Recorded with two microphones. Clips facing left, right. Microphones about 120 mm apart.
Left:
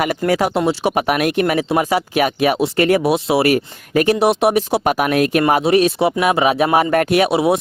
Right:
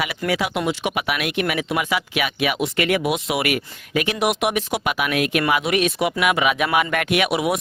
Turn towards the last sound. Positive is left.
turn(degrees=30)  # may be behind; listen again after turning